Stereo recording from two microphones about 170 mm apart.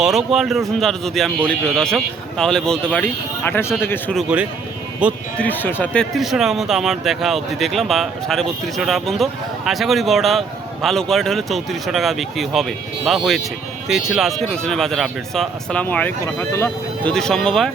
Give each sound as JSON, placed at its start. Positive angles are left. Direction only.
{"t": 0.0, "sound": "speech", "side_deg": 0}
{"t": 4.1, "sound": "speech", "side_deg": -5}
{"t": 5.4, "sound": "speech", "side_deg": 10}